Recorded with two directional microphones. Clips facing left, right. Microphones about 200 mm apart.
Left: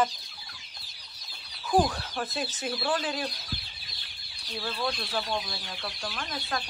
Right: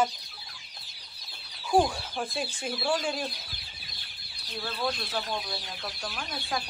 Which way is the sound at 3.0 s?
5° left (ahead or behind).